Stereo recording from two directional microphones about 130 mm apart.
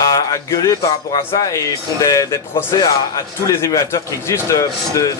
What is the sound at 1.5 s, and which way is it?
Speech, 25° left (ahead or behind).